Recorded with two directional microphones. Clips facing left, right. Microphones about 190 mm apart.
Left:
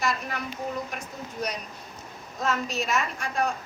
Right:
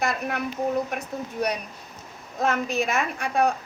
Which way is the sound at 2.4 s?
55° right (ahead or behind).